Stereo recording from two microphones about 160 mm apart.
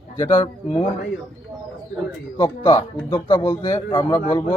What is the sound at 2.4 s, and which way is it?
A man's voice, 30° left (ahead or behind).